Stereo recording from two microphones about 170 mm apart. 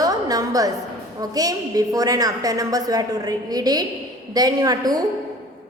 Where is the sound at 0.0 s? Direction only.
20° right (ahead or behind).